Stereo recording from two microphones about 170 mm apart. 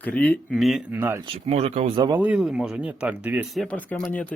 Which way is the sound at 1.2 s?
35° right (ahead or behind).